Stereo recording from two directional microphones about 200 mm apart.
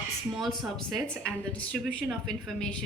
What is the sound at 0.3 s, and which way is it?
Speech, centre (ahead or behind).